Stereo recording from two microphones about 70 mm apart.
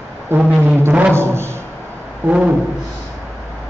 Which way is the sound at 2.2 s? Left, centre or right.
Centre.